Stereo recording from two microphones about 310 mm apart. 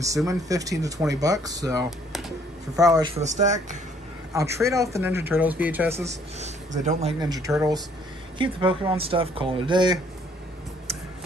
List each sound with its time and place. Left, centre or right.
0.0 s speech: centre
1.9 s a sound: centre
2.7 s speech: centre
4.3 s speech: centre
6.0 s speech: right